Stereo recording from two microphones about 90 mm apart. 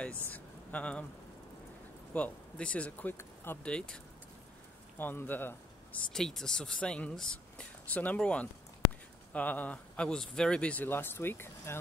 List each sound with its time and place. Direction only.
0.3 s a sound: 15° left (ahead or behind)
2.1 s speech: 15° left (ahead or behind)
3.6 s speech: 10° left (ahead or behind)
4.9 s speech: 20° left (ahead or behind)
6.1 s speech: 5° left (ahead or behind); by 11.7 s 25° left (ahead or behind)